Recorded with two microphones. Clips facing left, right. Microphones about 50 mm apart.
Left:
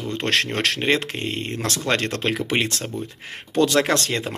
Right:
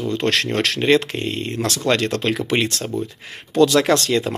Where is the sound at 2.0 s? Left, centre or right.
Left.